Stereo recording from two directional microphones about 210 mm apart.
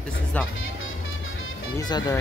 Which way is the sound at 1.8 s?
20° left (ahead or behind).